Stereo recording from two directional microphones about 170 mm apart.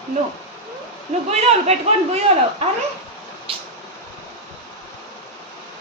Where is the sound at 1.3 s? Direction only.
40° right (ahead or behind).